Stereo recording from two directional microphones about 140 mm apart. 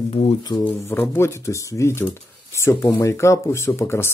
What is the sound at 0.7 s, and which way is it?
Speech, 15° left (ahead or behind).